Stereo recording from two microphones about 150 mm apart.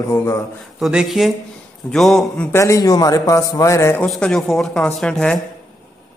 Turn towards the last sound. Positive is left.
turn(degrees=5)  # may be behind; listen again after turning